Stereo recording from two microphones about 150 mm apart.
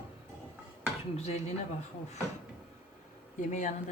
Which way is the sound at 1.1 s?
45° left (ahead or behind).